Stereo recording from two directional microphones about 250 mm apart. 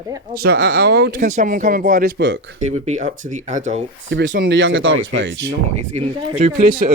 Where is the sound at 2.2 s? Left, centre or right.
Right.